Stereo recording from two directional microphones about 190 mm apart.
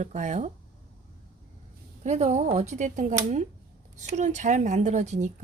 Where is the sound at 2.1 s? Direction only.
35° right (ahead or behind).